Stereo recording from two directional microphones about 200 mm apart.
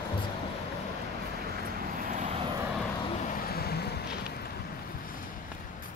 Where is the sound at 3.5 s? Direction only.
50° left (ahead or behind).